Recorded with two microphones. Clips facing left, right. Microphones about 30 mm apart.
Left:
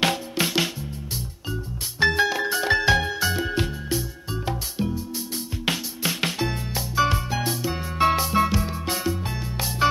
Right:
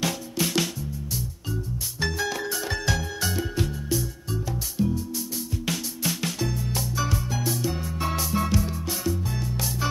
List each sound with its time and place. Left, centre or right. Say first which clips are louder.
0.0 s music: left 4 dB; left
1.5 s music: left 1 dB; left
3.5 s music: left 1 dB; left